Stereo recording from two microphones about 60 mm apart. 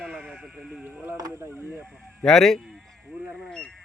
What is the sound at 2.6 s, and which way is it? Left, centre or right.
Sheep, centre.